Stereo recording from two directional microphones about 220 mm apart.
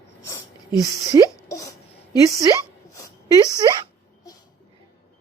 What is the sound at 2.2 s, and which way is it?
Speech, 15° right (ahead or behind).